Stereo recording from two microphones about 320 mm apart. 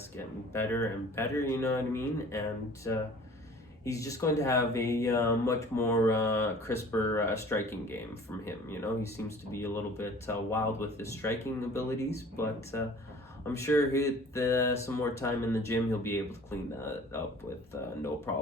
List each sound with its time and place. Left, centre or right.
0.5 s speech: centre